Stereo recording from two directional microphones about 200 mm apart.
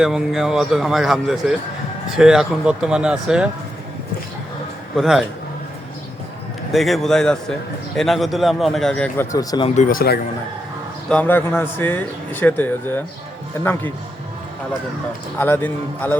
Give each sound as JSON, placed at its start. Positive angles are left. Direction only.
{"t": 0.0, "sound": "a man's voice", "side_deg": 0}
{"t": 4.9, "sound": "a man's voice", "side_deg": 0}
{"t": 6.7, "sound": "a man's voice", "side_deg": 0}
{"t": 9.3, "sound": "speech", "side_deg": 20}
{"t": 9.6, "sound": "speech", "side_deg": 40}
{"t": 11.1, "sound": "speech", "side_deg": 10}
{"t": 15.4, "sound": "speech", "side_deg": 10}